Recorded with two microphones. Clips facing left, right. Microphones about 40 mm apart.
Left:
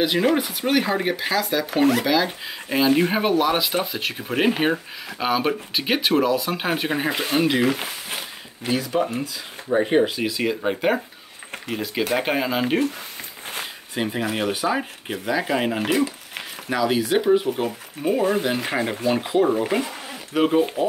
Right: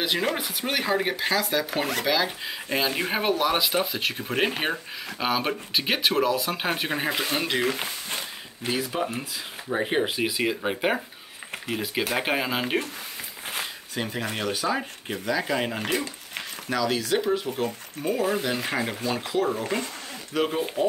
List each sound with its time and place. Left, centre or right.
0.0 s speech: centre
9.0 s speech: centre
13.9 s speech: centre
16.7 s speech: centre
18.6 s speech: centre